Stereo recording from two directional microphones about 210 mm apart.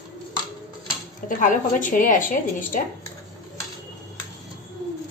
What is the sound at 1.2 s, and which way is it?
A woman's voice, 40° left (ahead or behind).